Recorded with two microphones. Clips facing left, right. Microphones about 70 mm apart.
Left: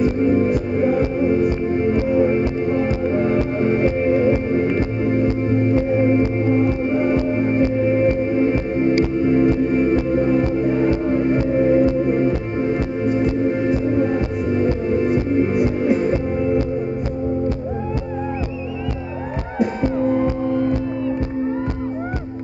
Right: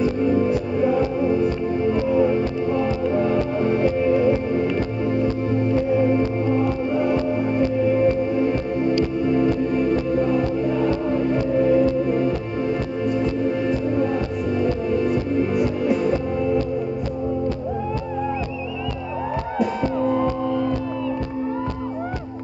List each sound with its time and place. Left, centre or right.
0.0 s music: left
14.0 s music: left